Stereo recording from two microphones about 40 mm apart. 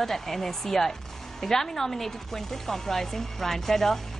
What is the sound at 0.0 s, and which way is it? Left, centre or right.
Speech, centre.